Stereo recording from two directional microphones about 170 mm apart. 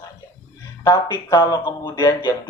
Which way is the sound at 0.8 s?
25° left (ahead or behind).